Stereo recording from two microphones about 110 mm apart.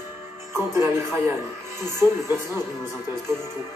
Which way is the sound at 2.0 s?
35° left (ahead or behind).